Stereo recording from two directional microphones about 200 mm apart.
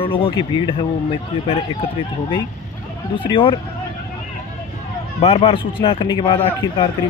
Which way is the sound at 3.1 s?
25° left (ahead or behind).